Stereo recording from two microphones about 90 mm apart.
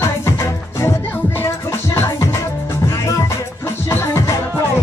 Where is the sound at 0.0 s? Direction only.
30° left (ahead or behind).